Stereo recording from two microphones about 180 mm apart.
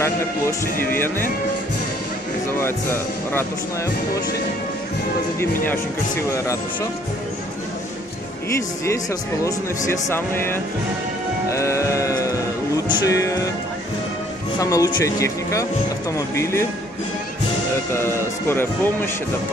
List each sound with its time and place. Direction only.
0.0 s speech: 15° left (ahead or behind)
2.6 s speech: 10° left (ahead or behind)
6.3 s speech: 15° left (ahead or behind)
9.4 s speech: 15° left (ahead or behind)
11.5 s music: 15° left (ahead or behind)
14.6 s speech: 20° left (ahead or behind)
17.9 s speech: 15° left (ahead or behind)